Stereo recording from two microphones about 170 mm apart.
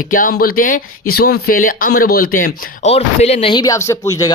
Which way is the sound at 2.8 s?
40° left (ahead or behind).